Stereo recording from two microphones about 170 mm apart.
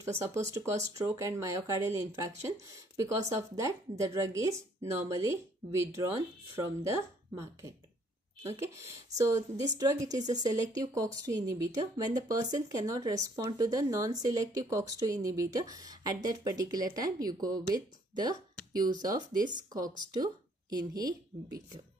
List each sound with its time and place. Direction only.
0.0 s speech: 15° right (ahead or behind)
8.4 s speech: 15° right (ahead or behind)